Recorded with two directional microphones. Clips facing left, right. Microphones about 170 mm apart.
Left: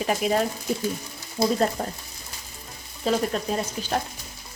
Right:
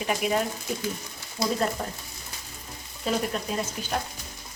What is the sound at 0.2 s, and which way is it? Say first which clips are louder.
Speech: left 2 dB; 30° left (ahead or behind).